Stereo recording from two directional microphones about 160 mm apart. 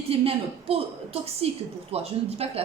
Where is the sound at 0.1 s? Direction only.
40° right (ahead or behind).